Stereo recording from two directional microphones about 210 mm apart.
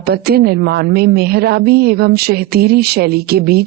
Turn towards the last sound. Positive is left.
turn(degrees=-50)  # may be behind; listen again after turning